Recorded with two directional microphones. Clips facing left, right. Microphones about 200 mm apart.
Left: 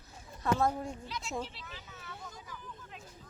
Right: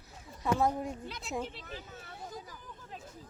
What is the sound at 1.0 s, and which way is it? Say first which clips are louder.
Speech: left 1 dB; 55° right (ahead or behind).